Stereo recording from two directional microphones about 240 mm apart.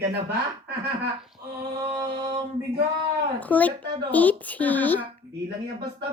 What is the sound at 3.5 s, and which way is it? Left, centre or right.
Speech, centre.